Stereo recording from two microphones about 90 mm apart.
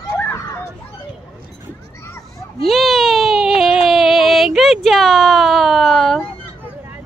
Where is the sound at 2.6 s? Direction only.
5° left (ahead or behind).